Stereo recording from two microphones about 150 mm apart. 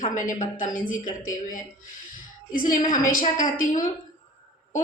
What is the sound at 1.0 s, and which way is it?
Speech, 25° left (ahead or behind).